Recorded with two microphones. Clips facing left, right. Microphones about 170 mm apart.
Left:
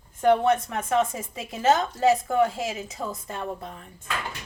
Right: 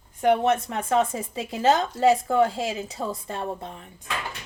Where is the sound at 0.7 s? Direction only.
30° right (ahead or behind).